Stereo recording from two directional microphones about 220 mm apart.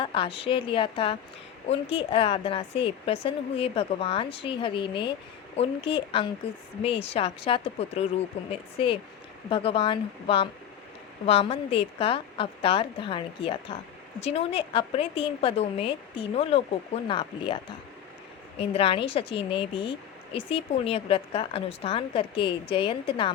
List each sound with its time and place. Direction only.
0.0 s speech: 25° left (ahead or behind)
18.6 s speech: 25° left (ahead or behind)